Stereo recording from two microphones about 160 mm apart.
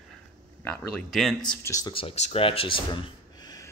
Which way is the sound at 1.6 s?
20° left (ahead or behind).